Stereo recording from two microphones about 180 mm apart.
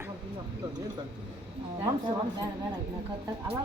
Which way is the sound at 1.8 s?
20° right (ahead or behind).